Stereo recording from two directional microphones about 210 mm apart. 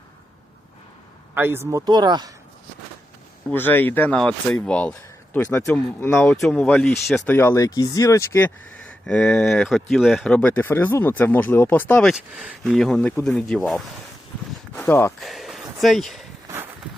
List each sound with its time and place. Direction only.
1.4 s speech: 10° right (ahead or behind)
3.5 s speech: 10° left (ahead or behind)
15.2 s speech: centre (ahead or behind)